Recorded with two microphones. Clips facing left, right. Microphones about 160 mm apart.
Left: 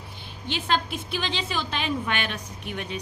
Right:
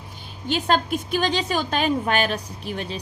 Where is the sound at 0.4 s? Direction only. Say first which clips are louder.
Right 5 dB; 45° right (ahead or behind).